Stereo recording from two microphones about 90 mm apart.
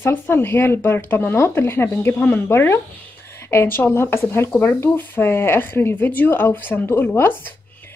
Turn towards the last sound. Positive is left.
turn(degrees=25)  # may be behind; listen again after turning